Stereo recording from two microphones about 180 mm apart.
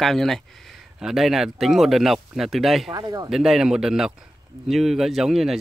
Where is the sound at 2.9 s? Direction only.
20° right (ahead or behind).